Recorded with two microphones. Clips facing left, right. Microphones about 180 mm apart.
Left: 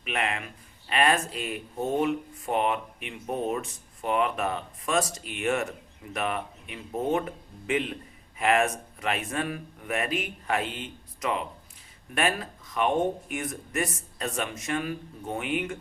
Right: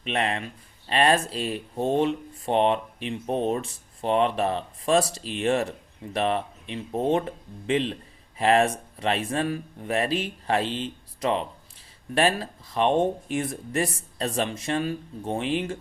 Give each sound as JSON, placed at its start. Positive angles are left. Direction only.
{"t": 0.0, "sound": "speech", "side_deg": -30}